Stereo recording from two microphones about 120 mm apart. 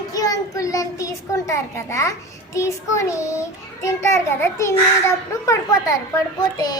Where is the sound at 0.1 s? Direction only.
30° left (ahead or behind).